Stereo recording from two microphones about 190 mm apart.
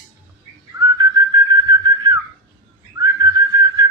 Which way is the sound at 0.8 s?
20° right (ahead or behind).